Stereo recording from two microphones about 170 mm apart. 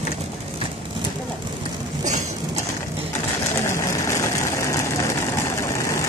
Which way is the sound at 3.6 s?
15° left (ahead or behind).